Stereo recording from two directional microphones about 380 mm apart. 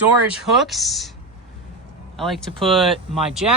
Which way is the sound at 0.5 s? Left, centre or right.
Centre.